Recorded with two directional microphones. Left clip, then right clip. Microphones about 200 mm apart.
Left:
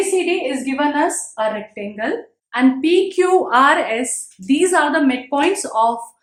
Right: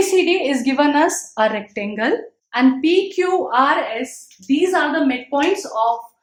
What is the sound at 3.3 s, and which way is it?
Speech, 30° left (ahead or behind).